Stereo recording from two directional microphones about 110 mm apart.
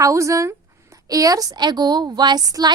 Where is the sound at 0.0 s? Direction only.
30° right (ahead or behind).